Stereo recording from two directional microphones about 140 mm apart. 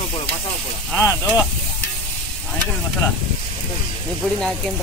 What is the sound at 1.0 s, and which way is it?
Speech, 15° left (ahead or behind).